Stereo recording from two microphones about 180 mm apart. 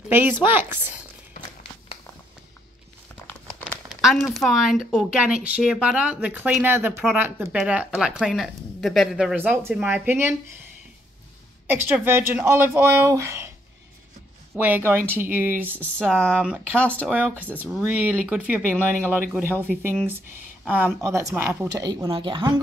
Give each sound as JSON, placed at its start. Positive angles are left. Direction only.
{"t": 0.1, "sound": "speech", "side_deg": -10}
{"t": 3.9, "sound": "speech", "side_deg": 0}
{"t": 11.7, "sound": "speech", "side_deg": -10}
{"t": 14.5, "sound": "speech", "side_deg": -10}
{"t": 16.7, "sound": "a woman's voice", "side_deg": 5}